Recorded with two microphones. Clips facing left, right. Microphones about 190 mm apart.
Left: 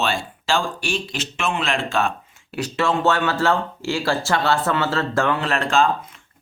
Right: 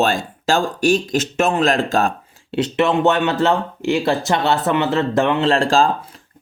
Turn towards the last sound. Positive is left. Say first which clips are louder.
# right 3 dB
turn(degrees=-35)  # may be behind; listen again after turning